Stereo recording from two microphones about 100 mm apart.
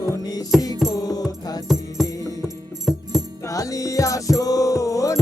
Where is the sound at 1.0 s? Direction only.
40° left (ahead or behind).